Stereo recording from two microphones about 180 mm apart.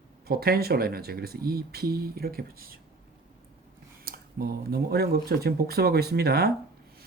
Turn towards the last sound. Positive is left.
turn(degrees=-60)  # may be behind; listen again after turning